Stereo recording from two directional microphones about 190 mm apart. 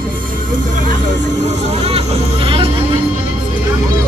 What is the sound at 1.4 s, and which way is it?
Vehicle, 35° right (ahead or behind).